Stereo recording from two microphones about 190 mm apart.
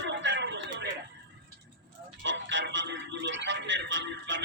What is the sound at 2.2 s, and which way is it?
Speech, 75° right (ahead or behind).